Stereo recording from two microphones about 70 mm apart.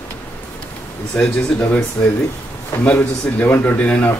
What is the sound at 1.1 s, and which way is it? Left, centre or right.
Speech, left.